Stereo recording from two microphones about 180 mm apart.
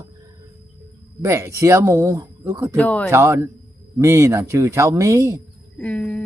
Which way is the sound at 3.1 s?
15° right (ahead or behind).